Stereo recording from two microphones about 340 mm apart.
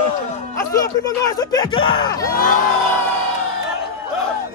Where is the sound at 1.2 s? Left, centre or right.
Centre.